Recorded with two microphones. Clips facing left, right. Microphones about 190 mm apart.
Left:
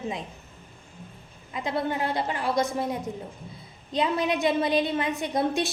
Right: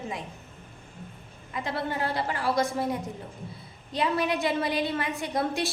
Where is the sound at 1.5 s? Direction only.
20° left (ahead or behind).